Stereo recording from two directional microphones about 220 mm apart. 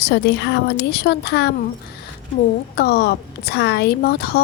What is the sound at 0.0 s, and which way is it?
A woman's voice, 50° left (ahead or behind).